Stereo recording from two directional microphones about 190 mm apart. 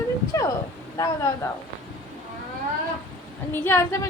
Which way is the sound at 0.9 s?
15° left (ahead or behind).